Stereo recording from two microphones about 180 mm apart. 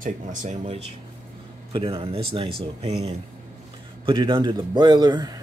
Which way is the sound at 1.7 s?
30° right (ahead or behind).